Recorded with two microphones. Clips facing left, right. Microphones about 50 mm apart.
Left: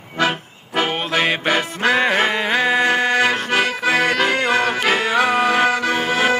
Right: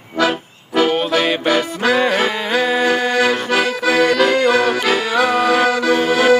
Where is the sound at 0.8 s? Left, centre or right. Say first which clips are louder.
Right 4 dB; left.